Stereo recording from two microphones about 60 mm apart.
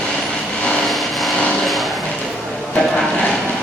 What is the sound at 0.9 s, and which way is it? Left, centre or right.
Vehicle, centre.